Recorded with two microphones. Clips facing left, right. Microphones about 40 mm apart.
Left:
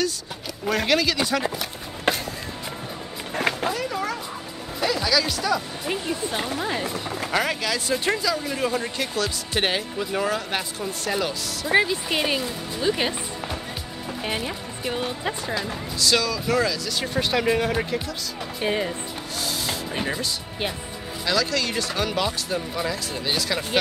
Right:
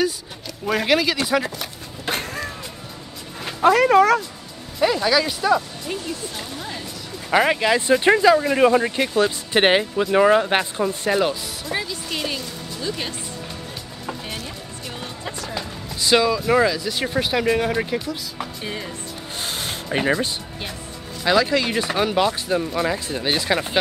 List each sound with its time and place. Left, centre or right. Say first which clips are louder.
0.7 s speech: right 2 dB; centre
2.1 s a sound: left 2 dB; left
3.6 s speech: right 12 dB; right
4.7 s speech: right 4 dB; centre
5.9 s speech: left 2 dB; left
7.2 s speech: right 8 dB; right
11.1 s speech: right 5 dB; centre
11.6 s speech: left 8 dB; left
14.2 s speech: left 4 dB; left
16.0 s speech: right 5 dB; right; by 17.9 s centre
18.6 s speech: left 10 dB; left
19.3 s music: even; right
21.2 s speech: right 5 dB; right